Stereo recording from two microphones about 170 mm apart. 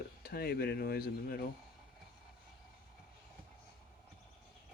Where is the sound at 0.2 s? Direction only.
65° left (ahead or behind).